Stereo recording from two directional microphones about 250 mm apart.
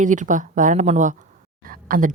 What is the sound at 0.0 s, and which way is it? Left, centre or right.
A woman's voice, right.